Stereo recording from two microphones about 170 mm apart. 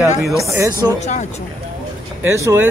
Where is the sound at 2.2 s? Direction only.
15° right (ahead or behind).